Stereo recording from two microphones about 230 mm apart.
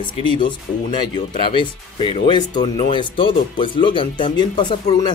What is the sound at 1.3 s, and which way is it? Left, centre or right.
Speech, left.